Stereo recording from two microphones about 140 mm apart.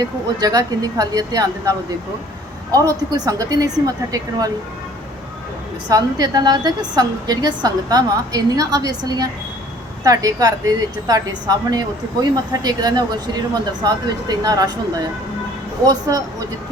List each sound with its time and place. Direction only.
0.0 s a woman's voice: 30° right (ahead or behind)
2.7 s a woman's voice: 25° right (ahead or behind)
5.9 s a woman's voice: 25° right (ahead or behind)